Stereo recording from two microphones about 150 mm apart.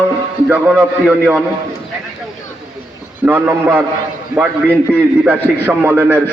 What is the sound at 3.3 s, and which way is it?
A man's voice, 15° right (ahead or behind).